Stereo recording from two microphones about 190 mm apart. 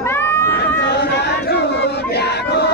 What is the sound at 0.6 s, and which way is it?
Crowd, 60° left (ahead or behind).